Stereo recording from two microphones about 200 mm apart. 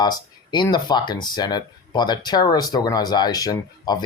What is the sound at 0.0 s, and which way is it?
Speech, 20° left (ahead or behind).